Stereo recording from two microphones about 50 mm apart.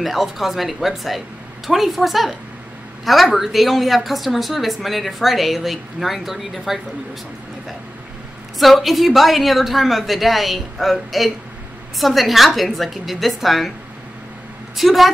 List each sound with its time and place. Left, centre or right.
0.0 s speech: centre
3.3 s speech: centre
8.5 s speech: centre
14.8 s speech: centre